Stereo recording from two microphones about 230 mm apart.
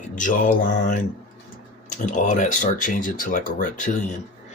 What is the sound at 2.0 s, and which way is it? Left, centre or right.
Speech, left.